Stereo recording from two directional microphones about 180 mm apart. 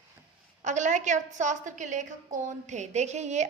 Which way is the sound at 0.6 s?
40° right (ahead or behind).